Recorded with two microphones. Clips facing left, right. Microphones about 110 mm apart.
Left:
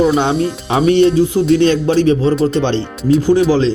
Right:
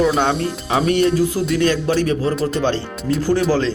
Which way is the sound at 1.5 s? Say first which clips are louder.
Left 4 dB; 30° left (ahead or behind).